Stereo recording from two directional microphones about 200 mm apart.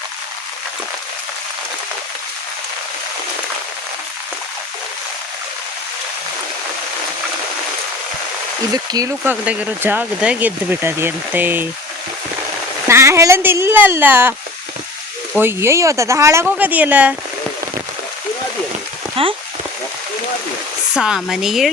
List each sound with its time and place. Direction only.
8.7 s speech: 20° right (ahead or behind)
12.9 s speech: 15° right (ahead or behind)
15.4 s speech: 10° right (ahead or behind)
19.2 s speech: 25° right (ahead or behind)
20.9 s speech: 5° right (ahead or behind)